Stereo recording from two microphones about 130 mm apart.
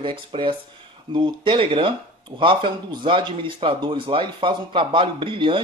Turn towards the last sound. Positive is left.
turn(degrees=-40)  # may be behind; listen again after turning